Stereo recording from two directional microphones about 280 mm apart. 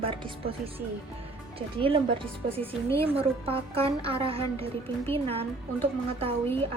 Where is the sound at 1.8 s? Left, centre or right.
Centre.